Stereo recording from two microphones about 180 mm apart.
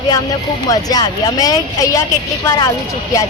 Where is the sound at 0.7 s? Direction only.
20° left (ahead or behind).